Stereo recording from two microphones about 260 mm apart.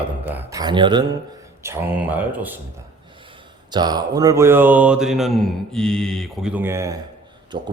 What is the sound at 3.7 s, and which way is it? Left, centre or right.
Mantra, centre.